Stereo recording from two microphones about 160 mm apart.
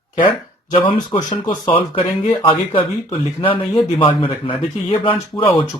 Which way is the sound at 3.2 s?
35° left (ahead or behind).